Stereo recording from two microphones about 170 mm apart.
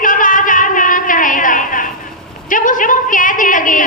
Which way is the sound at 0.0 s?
50° left (ahead or behind).